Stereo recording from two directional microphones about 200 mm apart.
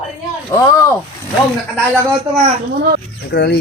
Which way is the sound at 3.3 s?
55° left (ahead or behind).